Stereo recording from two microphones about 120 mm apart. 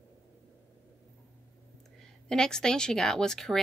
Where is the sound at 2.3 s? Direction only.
5° left (ahead or behind).